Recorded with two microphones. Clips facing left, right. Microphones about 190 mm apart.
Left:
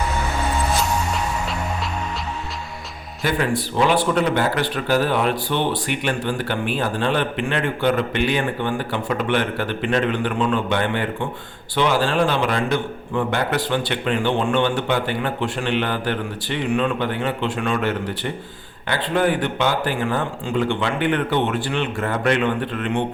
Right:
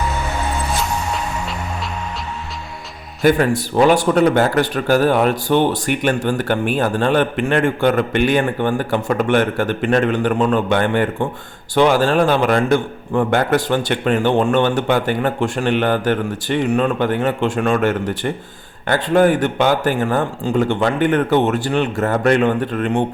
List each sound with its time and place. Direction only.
3.2 s speech: 45° right (ahead or behind)